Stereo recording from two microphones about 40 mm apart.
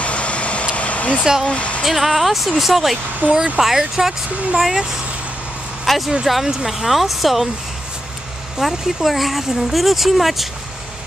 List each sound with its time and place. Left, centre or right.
0.0 s vehicle: left
1.2 s speech: centre
1.5 s speech: left
1.8 s speech: centre
5.9 s speech: centre
8.5 s speech: centre